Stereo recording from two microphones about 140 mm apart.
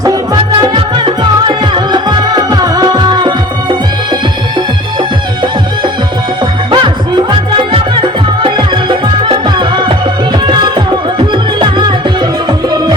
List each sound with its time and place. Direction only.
0.6 s music: 30° right (ahead or behind)